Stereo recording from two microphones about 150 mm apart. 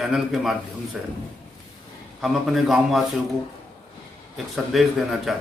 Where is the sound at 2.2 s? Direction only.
Centre (ahead or behind).